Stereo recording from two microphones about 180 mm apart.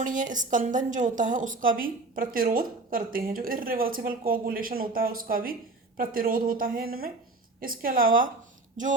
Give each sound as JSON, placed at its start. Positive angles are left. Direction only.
{"t": 0.0, "sound": "a woman's voice", "side_deg": -45}